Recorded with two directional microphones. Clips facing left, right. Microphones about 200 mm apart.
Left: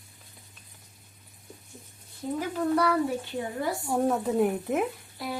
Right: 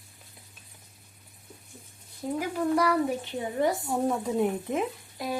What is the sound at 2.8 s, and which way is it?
Speech, 15° right (ahead or behind).